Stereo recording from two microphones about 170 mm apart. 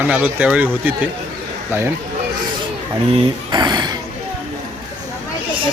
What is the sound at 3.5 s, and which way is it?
Speech, 25° right (ahead or behind).